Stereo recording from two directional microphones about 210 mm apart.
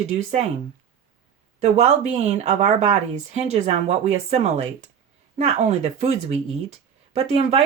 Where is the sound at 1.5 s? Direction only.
30° right (ahead or behind).